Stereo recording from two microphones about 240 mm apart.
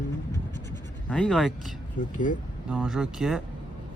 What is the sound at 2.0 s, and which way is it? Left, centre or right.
Speech, left.